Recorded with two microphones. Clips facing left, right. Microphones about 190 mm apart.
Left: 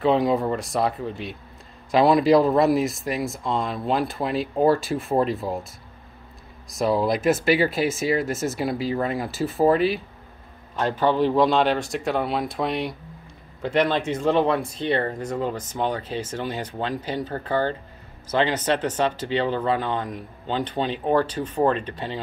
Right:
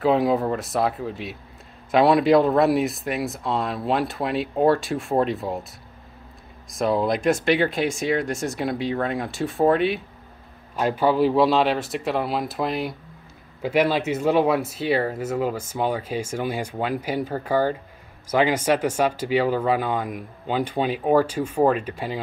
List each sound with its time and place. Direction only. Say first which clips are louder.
0.0 s speech: even; centre (ahead or behind)
6.7 s speech: even; centre (ahead or behind)
10.8 s speech: right 1 dB; 10° right (ahead or behind)